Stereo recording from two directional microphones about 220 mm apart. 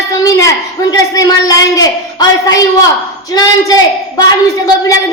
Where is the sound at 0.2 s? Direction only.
15° left (ahead or behind).